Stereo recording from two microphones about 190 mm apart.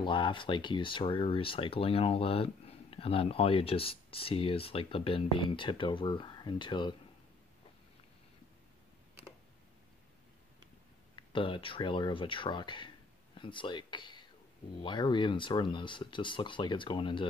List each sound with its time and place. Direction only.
0.0 s speech: 25° left (ahead or behind)
11.1 s speech: 25° left (ahead or behind)